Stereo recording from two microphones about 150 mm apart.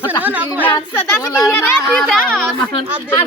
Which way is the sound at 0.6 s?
15° left (ahead or behind).